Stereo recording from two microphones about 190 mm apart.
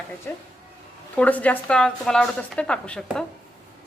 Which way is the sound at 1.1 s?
10° left (ahead or behind).